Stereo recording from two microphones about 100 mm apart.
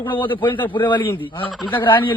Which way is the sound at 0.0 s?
55° left (ahead or behind).